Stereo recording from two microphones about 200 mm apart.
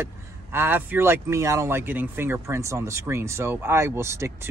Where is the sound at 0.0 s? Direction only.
10° right (ahead or behind).